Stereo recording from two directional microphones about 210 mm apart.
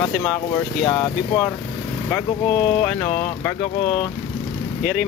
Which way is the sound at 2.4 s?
25° left (ahead or behind).